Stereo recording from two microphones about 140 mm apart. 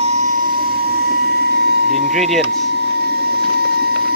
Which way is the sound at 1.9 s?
Centre (ahead or behind).